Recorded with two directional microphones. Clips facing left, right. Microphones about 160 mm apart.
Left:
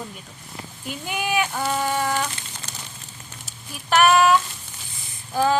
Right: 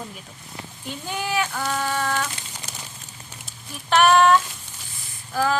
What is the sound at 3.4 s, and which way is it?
Speech, centre (ahead or behind).